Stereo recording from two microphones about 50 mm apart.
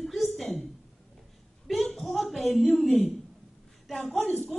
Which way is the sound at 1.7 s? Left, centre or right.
Centre.